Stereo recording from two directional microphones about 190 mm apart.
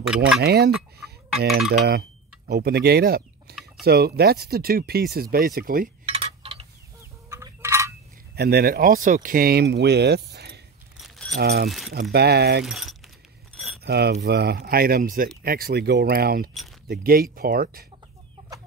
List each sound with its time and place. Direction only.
0.0 s speech: 5° right (ahead or behind)
0.4 s speech: 55° right (ahead or behind)
1.9 s speech: 55° right (ahead or behind)
6.0 s a sound: 30° right (ahead or behind)
7.2 s fowl: 15° right (ahead or behind)
8.4 s speech: 55° right (ahead or behind)
11.0 s keys jangling: centre (ahead or behind)
11.3 s speech: 55° right (ahead or behind)
12.6 s speech: centre (ahead or behind)
13.8 s keys jangling: 60° right (ahead or behind)
14.2 s speech: 60° right (ahead or behind)